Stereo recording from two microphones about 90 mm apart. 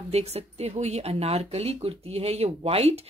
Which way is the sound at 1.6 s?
90° right.